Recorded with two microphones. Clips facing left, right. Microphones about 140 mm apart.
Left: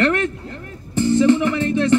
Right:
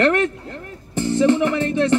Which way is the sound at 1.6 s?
65° right (ahead or behind).